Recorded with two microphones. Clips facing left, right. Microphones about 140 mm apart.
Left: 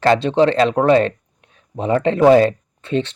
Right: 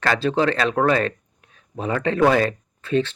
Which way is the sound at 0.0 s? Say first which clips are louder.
Left 6 dB; 25° left (ahead or behind).